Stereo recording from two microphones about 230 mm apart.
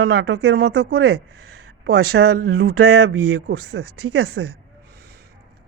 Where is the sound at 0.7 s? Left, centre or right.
Right.